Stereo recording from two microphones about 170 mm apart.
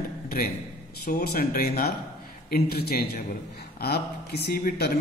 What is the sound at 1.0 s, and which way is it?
A man's voice, 65° left (ahead or behind).